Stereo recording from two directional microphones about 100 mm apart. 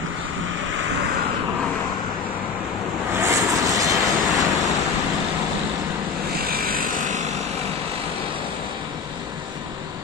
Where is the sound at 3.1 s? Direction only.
30° right (ahead or behind).